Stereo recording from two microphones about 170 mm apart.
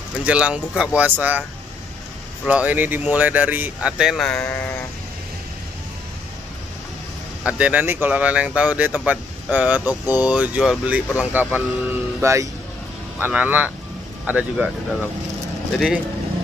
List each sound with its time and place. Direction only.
0.2 s speech: 5° right (ahead or behind)
2.4 s speech: 10° right (ahead or behind); by 4.6 s 10° left (ahead or behind)
7.4 s speech: 5° right (ahead or behind)